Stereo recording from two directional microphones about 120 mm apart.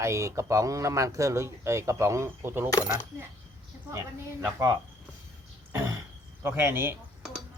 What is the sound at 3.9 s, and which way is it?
Speech, 20° right (ahead or behind).